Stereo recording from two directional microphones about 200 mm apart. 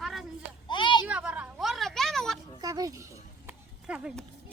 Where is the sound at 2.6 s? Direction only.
20° right (ahead or behind).